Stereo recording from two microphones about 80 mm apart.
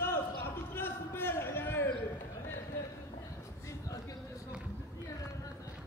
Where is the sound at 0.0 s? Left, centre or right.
Left.